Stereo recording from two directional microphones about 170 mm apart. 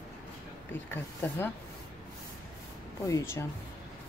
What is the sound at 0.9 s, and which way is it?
Speech, 15° left (ahead or behind).